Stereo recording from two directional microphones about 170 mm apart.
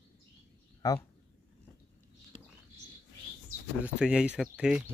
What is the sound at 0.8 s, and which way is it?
Speech, 20° left (ahead or behind).